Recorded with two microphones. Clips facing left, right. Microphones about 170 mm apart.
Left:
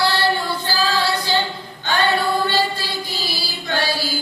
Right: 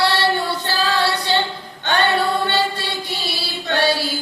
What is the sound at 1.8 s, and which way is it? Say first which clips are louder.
Chant: right 1 dB; 65° right (ahead or behind).